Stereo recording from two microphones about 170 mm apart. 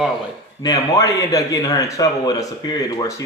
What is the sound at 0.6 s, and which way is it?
Speech, 20° left (ahead or behind).